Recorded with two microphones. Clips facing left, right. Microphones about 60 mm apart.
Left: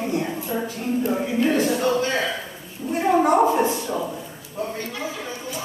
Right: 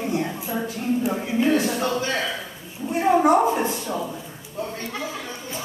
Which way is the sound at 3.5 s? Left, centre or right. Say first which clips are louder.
Left 3 dB; centre.